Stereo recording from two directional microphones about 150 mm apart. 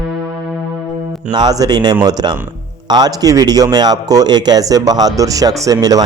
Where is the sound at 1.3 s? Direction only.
25° right (ahead or behind).